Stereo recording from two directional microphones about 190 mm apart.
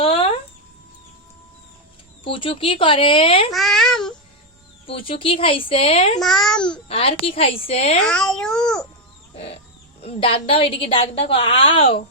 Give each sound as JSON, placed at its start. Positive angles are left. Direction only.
{"t": 0.0, "sound": "chicken", "side_deg": 30}
{"t": 2.2, "sound": "a woman's voice", "side_deg": 25}
{"t": 3.5, "sound": "a child's voice", "side_deg": 0}
{"t": 4.9, "sound": "a woman's voice", "side_deg": 30}
{"t": 6.1, "sound": "a child's voice", "side_deg": 0}
{"t": 6.8, "sound": "a woman's voice", "side_deg": 30}
{"t": 8.0, "sound": "a child's voice", "side_deg": 5}
{"t": 10.0, "sound": "a woman's voice", "side_deg": 30}